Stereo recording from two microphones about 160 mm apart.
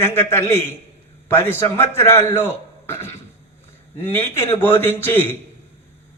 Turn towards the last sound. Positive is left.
turn(degrees=15)  # may be behind; listen again after turning